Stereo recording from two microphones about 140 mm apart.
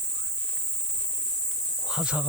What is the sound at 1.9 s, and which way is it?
Cricket, 5° right (ahead or behind).